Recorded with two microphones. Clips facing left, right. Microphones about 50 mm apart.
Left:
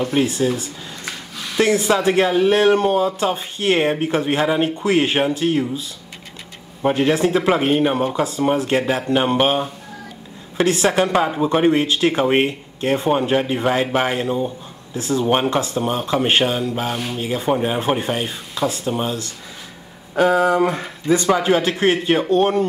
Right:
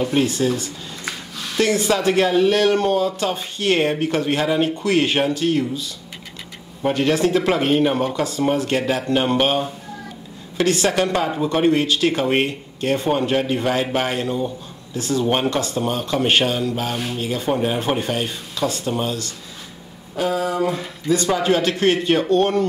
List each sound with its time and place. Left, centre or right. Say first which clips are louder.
0.0 s speech: even; centre; by 15.2 s left
15.2 s speech: left 3 dB; centre
15.5 s speech: left 2 dB; left
20.2 s speech: left 6 dB; left
21.3 s speech: left 1 dB; centre